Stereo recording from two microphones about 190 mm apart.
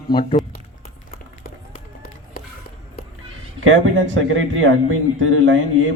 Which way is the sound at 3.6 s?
85° right.